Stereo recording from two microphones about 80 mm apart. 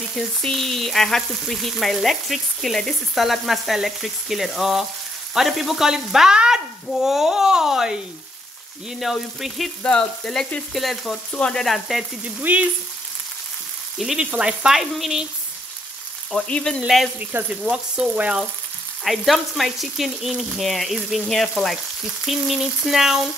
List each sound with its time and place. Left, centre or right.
0.1 s frying: centre
5.3 s speech: centre
9.0 s frying: centre
12.4 s speech: centre
13.9 s frying: centre
16.3 s speech: centre
16.8 s frying: centre
17.2 s speech: right
17.5 s speech: centre
19.0 s frying: centre